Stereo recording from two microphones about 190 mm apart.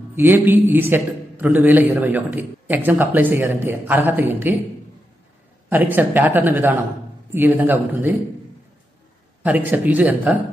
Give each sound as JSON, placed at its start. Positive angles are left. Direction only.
{"t": 0.1, "sound": "a man's voice", "side_deg": -10}
{"t": 5.7, "sound": "a man's voice", "side_deg": -10}
{"t": 9.4, "sound": "a man's voice", "side_deg": -10}